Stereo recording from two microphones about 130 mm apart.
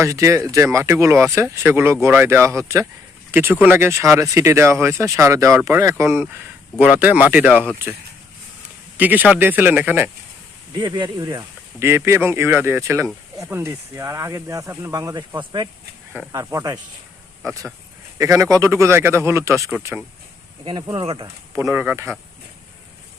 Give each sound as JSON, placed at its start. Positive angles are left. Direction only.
{"t": 0.0, "sound": "speech", "side_deg": -20}
{"t": 10.8, "sound": "speech", "side_deg": -35}
{"t": 11.8, "sound": "speech", "side_deg": -20}
{"t": 16.3, "sound": "speech", "side_deg": -25}
{"t": 20.7, "sound": "speech", "side_deg": -35}
{"t": 21.5, "sound": "speech", "side_deg": -20}